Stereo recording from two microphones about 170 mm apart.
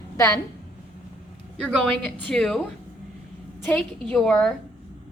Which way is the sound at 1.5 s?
5° left (ahead or behind).